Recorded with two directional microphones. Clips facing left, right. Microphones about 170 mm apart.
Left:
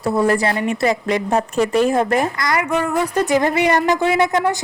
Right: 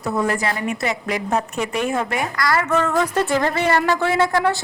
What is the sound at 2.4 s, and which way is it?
Speech, 20° left (ahead or behind).